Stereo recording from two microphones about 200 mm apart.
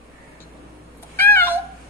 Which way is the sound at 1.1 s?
10° left (ahead or behind).